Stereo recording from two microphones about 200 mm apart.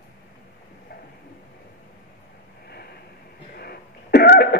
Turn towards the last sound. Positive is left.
turn(degrees=55)  # may be behind; listen again after turning